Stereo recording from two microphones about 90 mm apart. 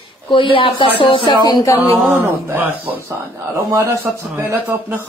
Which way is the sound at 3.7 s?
30° right (ahead or behind).